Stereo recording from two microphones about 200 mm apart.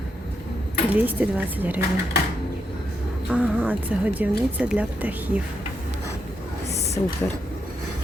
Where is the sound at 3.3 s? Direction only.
5° right (ahead or behind).